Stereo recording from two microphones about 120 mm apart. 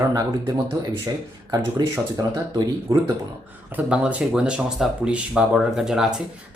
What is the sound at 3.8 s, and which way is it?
Speech, 10° right (ahead or behind).